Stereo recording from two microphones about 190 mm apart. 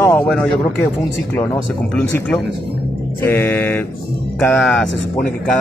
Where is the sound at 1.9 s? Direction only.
5° left (ahead or behind).